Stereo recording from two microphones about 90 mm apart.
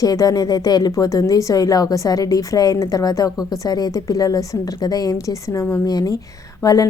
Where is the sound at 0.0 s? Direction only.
45° left (ahead or behind).